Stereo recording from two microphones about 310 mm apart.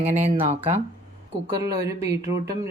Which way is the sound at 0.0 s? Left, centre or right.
Right.